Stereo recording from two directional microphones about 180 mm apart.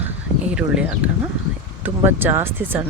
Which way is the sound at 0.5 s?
5° right (ahead or behind).